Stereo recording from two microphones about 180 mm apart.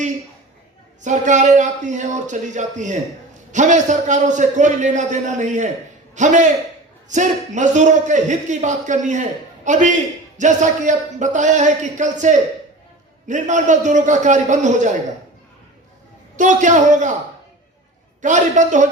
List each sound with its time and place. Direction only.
1.0 s a man's voice: 45° right (ahead or behind)
16.4 s a man's voice: 40° right (ahead or behind)
18.2 s a man's voice: 40° right (ahead or behind)